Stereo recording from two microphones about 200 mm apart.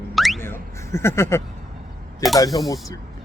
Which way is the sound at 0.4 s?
10° left (ahead or behind).